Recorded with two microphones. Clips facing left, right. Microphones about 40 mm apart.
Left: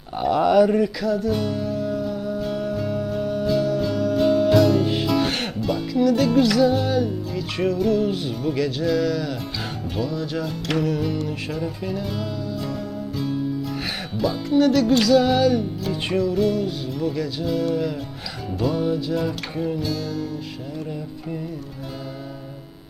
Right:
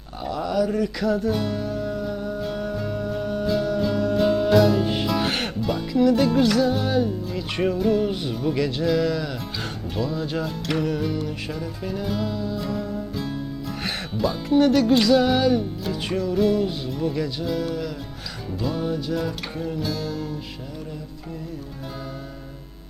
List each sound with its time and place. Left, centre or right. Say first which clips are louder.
0.2 s a sound: left 7 dB; left
0.9 s music: even; centre
15.9 s music: left 3 dB; centre